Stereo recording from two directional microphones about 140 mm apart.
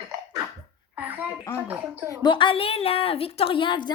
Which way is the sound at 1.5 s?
10° right (ahead or behind).